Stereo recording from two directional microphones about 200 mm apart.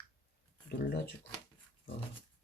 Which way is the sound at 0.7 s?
55° left (ahead or behind).